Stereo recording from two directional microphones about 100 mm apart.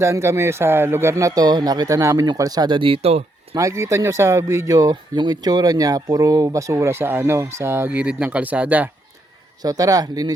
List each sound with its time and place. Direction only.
0.0 s speech: 30° right (ahead or behind); by 3.2 s 90° right
3.5 s speech: 30° right (ahead or behind); by 8.9 s 15° right (ahead or behind)
9.6 s speech: 35° right (ahead or behind)